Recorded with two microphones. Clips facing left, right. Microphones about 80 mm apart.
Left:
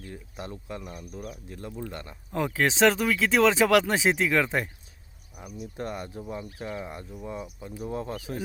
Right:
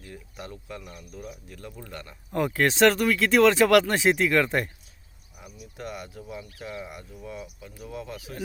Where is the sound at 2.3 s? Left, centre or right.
Centre.